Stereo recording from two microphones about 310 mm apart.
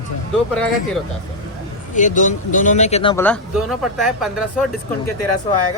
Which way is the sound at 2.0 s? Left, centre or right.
Left.